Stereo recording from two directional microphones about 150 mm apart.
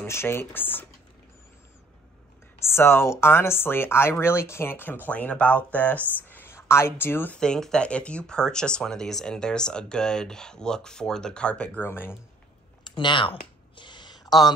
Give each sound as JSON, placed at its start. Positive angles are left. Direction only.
{"t": 0.0, "sound": "speech", "side_deg": 15}
{"t": 2.6, "sound": "speech", "side_deg": 15}
{"t": 12.8, "sound": "speech", "side_deg": 30}
{"t": 13.7, "sound": "a sound", "side_deg": 30}